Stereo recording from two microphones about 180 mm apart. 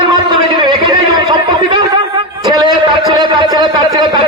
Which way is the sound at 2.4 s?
20° right (ahead or behind).